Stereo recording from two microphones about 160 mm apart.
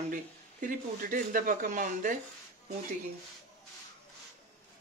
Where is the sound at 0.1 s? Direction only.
55° right (ahead or behind).